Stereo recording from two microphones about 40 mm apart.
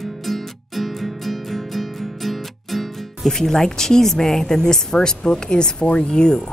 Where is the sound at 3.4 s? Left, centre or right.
Centre.